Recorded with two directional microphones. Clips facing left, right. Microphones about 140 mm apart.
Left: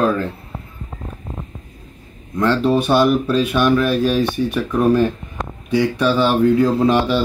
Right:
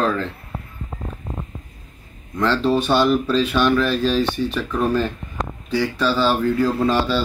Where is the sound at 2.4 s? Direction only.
10° left (ahead or behind).